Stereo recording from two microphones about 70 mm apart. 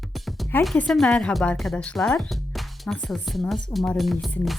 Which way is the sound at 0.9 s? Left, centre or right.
Centre.